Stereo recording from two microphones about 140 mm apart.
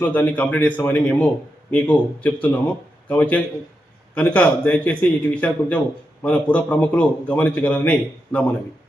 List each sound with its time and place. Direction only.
0.0 s a man's voice: 10° left (ahead or behind)